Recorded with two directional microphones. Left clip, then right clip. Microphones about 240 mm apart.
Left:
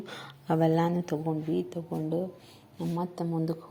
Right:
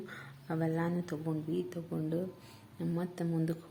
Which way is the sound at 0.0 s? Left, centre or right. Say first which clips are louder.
Left 5 dB; left.